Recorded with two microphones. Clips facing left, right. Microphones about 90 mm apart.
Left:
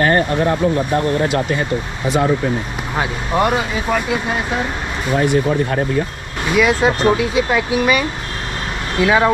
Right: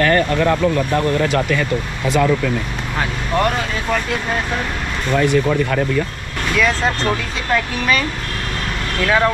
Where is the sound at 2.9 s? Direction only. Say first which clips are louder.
Left 2 dB; 15° left (ahead or behind).